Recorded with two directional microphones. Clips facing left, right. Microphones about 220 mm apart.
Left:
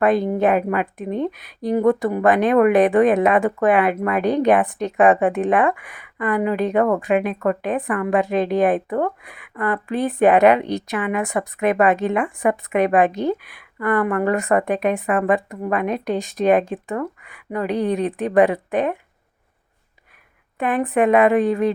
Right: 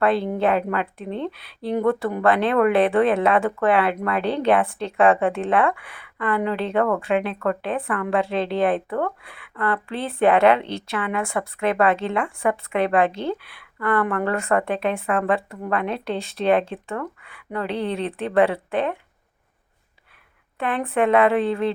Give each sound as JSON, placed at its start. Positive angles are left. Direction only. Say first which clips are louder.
{"t": 0.0, "sound": "speech", "louder": "left 3 dB", "side_deg": 15}
{"t": 20.6, "sound": "speech", "louder": "left 3 dB", "side_deg": 15}